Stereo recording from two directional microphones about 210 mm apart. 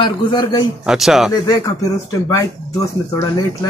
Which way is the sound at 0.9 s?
Centre (ahead or behind).